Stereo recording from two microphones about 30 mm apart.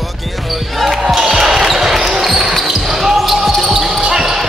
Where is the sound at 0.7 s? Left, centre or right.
Centre.